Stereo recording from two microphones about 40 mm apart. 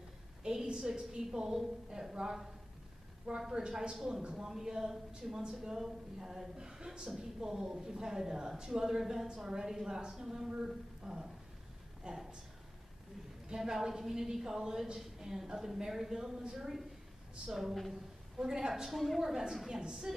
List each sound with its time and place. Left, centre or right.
0.4 s a sound: centre
0.7 s a woman's voice: centre
4.5 s a woman's voice: centre
12.1 s speech: right
13.6 s a woman's voice: centre
18.9 s a woman's voice: centre
19.7 s a woman's voice: centre